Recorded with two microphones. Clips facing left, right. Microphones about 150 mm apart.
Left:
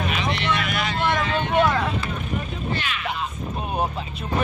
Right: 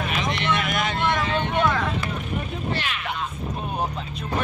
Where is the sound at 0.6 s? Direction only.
50° right (ahead or behind).